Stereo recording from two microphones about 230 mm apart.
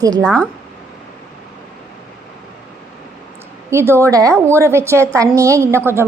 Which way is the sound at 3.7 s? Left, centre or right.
Centre.